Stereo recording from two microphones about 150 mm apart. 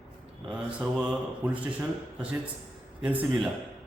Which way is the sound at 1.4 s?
20° right (ahead or behind).